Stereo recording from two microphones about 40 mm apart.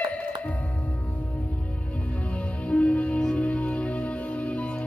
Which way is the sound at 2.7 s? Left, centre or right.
Left.